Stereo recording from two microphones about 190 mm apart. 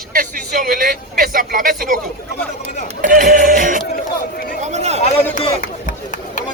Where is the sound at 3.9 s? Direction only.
45° left (ahead or behind).